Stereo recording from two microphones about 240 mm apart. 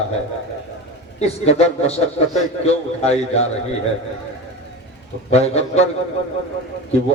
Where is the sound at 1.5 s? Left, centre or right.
Left.